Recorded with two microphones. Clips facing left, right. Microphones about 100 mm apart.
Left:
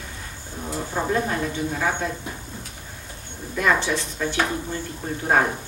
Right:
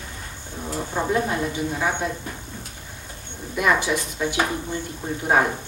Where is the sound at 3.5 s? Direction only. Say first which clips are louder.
Right 1 dB; 10° right (ahead or behind).